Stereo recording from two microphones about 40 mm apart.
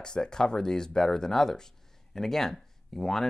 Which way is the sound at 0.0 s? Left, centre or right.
Centre.